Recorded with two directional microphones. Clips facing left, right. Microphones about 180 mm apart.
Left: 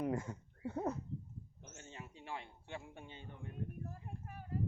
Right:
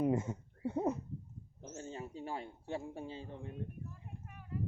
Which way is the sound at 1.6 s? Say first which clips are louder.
Right 10 dB; 35° right (ahead or behind).